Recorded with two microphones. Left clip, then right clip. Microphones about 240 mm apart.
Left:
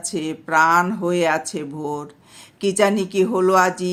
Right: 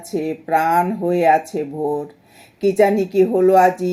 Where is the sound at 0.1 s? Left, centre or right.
Centre.